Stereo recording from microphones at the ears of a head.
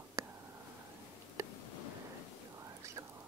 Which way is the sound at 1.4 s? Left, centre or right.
Left.